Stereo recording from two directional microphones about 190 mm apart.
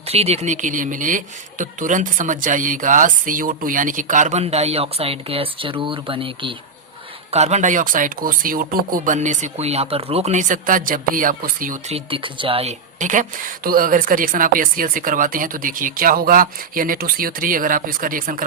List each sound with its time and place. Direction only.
0.1 s a woman's voice: 35° right (ahead or behind)
11.9 s speech: 25° right (ahead or behind)
13.0 s a woman's voice: 40° right (ahead or behind)